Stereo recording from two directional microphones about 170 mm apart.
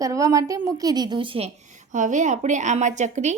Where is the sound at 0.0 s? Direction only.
20° right (ahead or behind).